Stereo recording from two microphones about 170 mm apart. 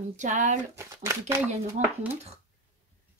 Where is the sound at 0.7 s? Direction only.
15° right (ahead or behind).